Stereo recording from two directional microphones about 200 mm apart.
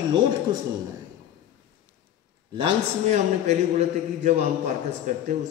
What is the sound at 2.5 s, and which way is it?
A man's voice, 30° right (ahead or behind).